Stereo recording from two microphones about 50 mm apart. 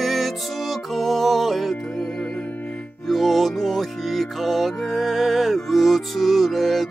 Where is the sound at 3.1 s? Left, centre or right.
Centre.